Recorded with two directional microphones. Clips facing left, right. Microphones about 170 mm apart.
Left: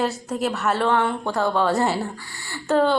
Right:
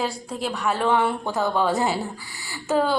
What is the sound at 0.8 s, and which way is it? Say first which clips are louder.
A woman's voice: right 1 dB; 5° right (ahead or behind).